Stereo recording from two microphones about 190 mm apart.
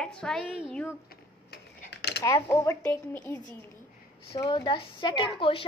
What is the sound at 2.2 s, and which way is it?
Speech, 15° left (ahead or behind).